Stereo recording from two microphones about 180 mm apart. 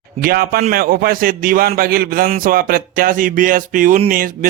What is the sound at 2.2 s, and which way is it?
Music, 45° right (ahead or behind).